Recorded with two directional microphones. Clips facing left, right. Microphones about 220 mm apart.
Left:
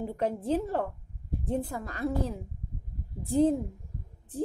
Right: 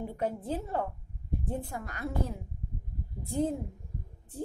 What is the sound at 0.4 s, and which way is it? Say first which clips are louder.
Speech: left 5 dB; 85° left.